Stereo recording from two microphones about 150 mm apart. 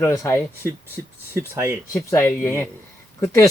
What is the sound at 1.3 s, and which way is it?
Speech, 15° right (ahead or behind).